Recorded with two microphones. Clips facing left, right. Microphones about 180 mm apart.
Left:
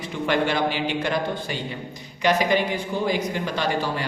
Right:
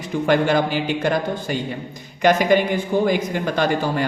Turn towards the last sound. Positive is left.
turn(degrees=-50)  # may be behind; listen again after turning